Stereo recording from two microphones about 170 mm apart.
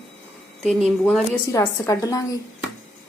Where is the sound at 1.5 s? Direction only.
20° left (ahead or behind).